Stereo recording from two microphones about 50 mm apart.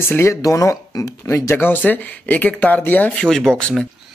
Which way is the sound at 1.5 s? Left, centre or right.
Left.